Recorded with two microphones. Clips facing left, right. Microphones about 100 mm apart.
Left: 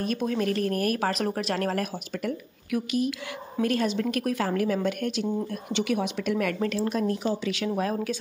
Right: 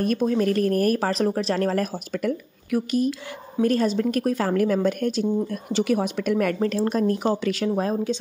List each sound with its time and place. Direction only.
0.2 s a woman's voice: 35° right (ahead or behind)